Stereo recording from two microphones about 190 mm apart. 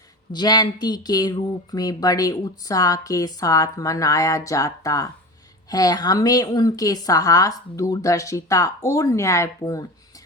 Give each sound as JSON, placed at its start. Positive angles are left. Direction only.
{"t": 0.3, "sound": "a woman's voice", "side_deg": 20}